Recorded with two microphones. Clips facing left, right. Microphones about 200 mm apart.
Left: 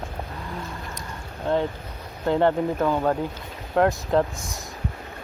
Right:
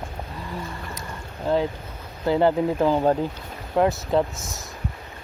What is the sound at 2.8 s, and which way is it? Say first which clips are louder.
Speech: right 4 dB; 25° right (ahead or behind).